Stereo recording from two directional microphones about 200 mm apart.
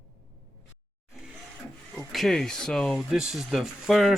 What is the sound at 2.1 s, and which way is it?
Speech, centre (ahead or behind).